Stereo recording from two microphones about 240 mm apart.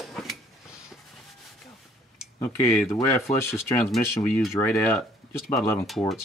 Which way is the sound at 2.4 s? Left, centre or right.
Centre.